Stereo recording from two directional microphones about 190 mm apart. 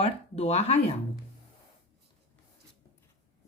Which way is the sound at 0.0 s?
35° left (ahead or behind).